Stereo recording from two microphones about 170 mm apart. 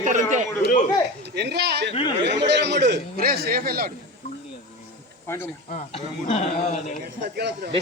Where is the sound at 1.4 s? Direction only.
80° right.